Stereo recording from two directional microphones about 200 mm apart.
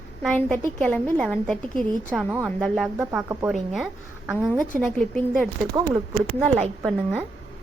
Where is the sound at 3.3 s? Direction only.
15° right (ahead or behind).